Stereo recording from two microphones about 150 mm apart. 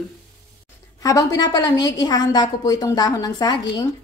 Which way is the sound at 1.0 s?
25° left (ahead or behind).